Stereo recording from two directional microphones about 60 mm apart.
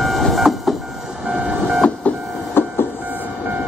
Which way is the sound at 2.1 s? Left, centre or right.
Left.